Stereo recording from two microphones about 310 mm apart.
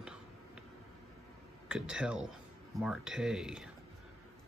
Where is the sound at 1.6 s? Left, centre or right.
Centre.